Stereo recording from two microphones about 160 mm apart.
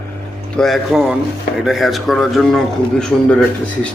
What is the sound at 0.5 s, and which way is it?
A man's voice, centre (ahead or behind).